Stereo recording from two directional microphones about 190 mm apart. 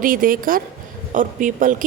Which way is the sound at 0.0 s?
45° right (ahead or behind).